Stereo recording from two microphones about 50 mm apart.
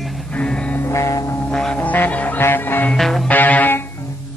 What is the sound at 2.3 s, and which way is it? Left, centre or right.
Music, left.